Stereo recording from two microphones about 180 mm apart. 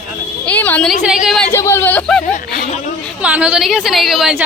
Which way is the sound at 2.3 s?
45° left (ahead or behind).